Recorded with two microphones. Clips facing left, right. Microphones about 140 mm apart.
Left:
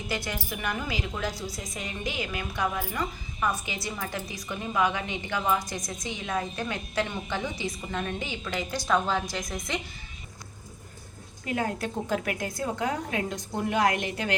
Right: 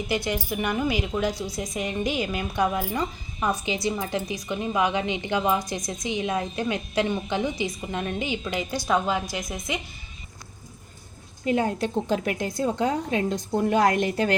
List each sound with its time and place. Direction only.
0.3 s a woman's voice: 20° right (ahead or behind)
11.4 s a woman's voice: 25° right (ahead or behind)